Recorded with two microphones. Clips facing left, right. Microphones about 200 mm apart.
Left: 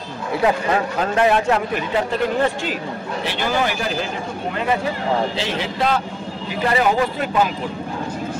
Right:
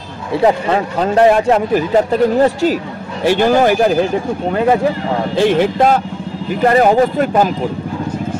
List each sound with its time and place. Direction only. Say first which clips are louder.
0.3 s speech: right 5 dB; 30° right (ahead or behind); by 3.9 s 45° right (ahead or behind)
5.3 s speech: right 12 dB; 55° right (ahead or behind)